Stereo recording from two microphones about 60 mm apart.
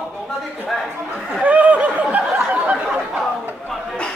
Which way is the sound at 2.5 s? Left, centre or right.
Right.